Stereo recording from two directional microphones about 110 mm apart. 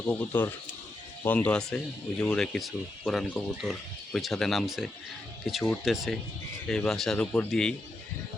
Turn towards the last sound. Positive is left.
turn(degrees=10)  # may be behind; listen again after turning